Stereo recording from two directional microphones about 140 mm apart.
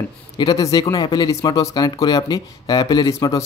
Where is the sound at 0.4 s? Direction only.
25° left (ahead or behind).